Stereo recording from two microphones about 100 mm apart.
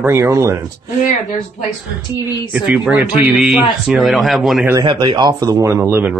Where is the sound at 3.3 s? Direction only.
5° right (ahead or behind).